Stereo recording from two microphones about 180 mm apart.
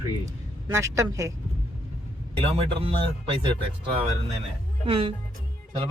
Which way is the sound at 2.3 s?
30° right (ahead or behind).